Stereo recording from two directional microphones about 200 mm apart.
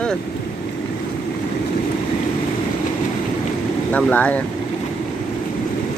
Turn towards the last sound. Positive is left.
turn(degrees=5)  # may be behind; listen again after turning